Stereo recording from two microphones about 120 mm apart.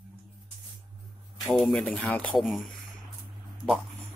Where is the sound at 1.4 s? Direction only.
Centre (ahead or behind).